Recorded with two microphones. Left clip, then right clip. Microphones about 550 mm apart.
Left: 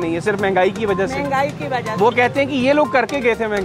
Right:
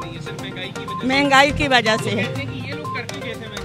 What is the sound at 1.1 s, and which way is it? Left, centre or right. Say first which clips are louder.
Speech: right 5 dB; right.